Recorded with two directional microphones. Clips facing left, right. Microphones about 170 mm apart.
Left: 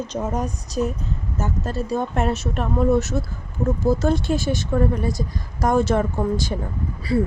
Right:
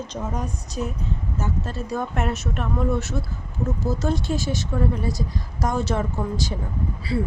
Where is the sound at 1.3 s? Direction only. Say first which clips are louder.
Left 4 dB; 45° left (ahead or behind).